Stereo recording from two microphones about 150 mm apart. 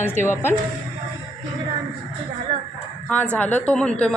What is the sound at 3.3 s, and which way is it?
Speech, 10° left (ahead or behind).